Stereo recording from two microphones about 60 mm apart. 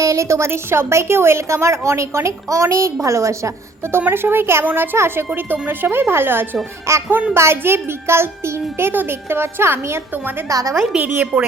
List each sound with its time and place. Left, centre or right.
0.0 s a woman's voice: right
4.1 s a woman's voice: right
6.9 s a woman's voice: right
10.1 s a woman's voice: right
10.5 s a woman's voice: right
10.9 s a woman's voice: right